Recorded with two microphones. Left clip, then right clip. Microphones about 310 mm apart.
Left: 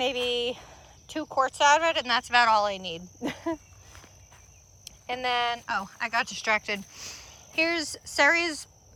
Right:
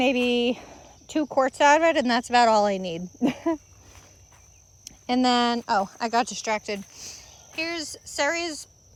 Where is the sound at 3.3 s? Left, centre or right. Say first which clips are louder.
Right 5 dB; right.